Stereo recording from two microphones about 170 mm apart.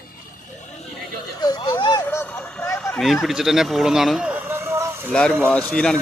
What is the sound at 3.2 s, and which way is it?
Speech, centre (ahead or behind).